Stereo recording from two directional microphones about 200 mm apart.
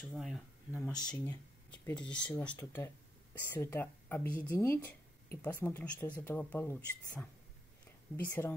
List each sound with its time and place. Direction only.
0.0 s speech: centre (ahead or behind)
0.9 s speech: 20° left (ahead or behind)
1.7 s speech: 5° left (ahead or behind)